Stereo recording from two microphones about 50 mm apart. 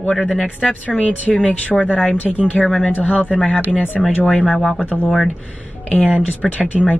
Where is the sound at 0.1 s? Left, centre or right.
Centre.